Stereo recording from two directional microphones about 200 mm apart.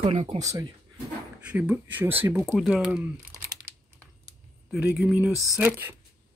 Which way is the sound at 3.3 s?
15° right (ahead or behind).